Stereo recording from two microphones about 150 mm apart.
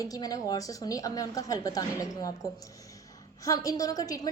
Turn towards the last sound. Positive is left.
turn(degrees=25)  # may be behind; listen again after turning